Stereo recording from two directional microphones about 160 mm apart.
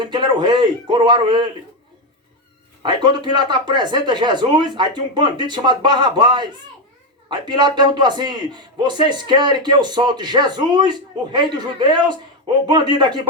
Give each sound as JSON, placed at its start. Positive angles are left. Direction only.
{"t": 0.0, "sound": "a man's voice", "side_deg": -30}
{"t": 2.8, "sound": "a man's voice", "side_deg": -30}